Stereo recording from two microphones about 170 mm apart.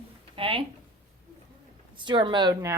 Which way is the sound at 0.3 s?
30° right (ahead or behind).